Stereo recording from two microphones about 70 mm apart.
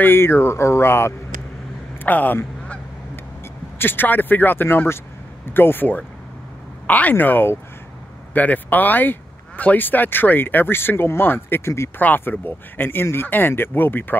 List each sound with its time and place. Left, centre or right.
0.0 s speech: left
2.0 s quack: left
3.7 s speech: left
12.0 s speech: left